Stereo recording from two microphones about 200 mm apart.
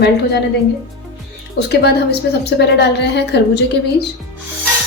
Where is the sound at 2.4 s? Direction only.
60° left (ahead or behind).